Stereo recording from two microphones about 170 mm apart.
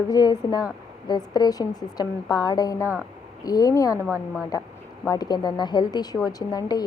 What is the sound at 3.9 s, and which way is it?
Speech, 10° right (ahead or behind).